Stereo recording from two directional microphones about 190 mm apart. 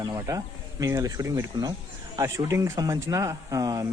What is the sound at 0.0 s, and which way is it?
A man's voice, 15° right (ahead or behind).